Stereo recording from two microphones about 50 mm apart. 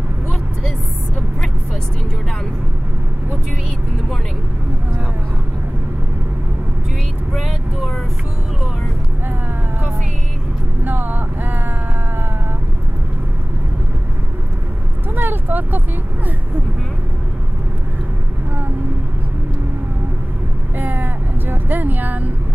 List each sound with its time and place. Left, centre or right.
7.3 s vehicle: centre
10.8 s vehicle: right
15.1 s a sound: right
20.7 s vehicle: right